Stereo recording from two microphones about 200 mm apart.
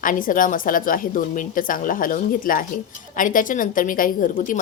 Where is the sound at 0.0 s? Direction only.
40° left (ahead or behind).